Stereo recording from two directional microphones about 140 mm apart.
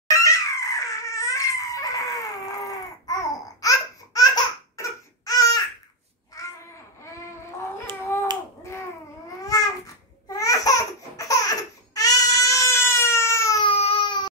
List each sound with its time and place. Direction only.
0.1 s crying: 25° left (ahead or behind)
4.7 s a sound: 25° left (ahead or behind)
9.4 s babbling: 25° left (ahead or behind)
10.2 s laughter: 25° left (ahead or behind)
13.6 s baby cry: 40° left (ahead or behind)